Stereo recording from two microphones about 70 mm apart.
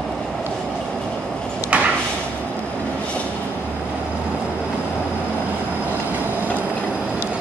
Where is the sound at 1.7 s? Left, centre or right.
Centre.